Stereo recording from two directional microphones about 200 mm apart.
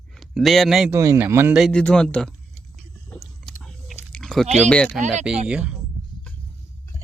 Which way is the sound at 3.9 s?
5° left (ahead or behind).